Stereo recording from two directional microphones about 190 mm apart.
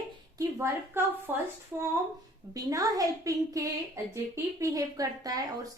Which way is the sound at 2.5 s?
20° right (ahead or behind).